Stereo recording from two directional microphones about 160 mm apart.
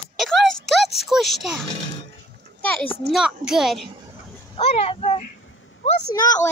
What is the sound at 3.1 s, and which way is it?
Speech, 5° right (ahead or behind).